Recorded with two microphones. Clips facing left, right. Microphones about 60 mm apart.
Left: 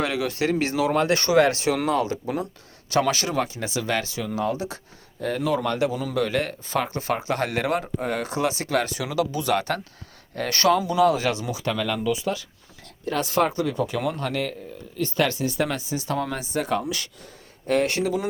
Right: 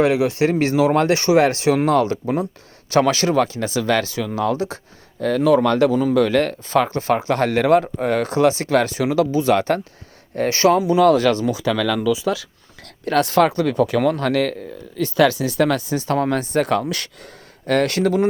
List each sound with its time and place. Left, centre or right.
0.0 s speech: right
1.5 s speech: right
1.9 s speech: right
3.6 s speech: right
4.4 s speech: right
6.0 s speech: right
11.0 s speech: right
11.5 s speech: right